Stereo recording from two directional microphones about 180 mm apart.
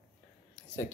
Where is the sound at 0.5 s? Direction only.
10° left (ahead or behind).